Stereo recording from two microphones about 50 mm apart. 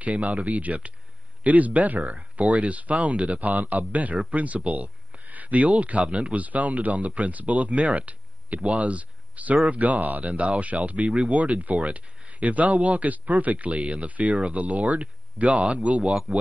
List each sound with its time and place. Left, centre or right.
0.0 s speech: right